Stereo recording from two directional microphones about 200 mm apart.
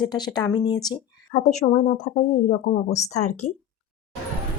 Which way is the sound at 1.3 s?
35° left (ahead or behind).